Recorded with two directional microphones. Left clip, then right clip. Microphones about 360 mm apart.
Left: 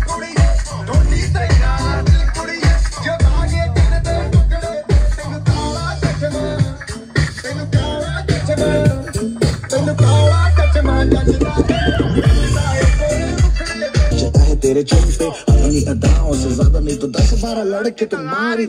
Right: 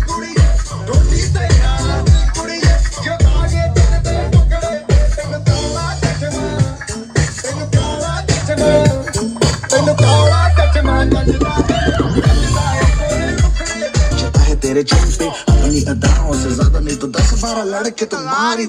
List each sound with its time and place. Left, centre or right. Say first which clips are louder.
8.5 s music: right 6 dB; right
17.9 s speech: right 2 dB; centre